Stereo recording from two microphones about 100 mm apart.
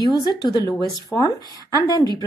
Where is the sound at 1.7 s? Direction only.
40° left (ahead or behind).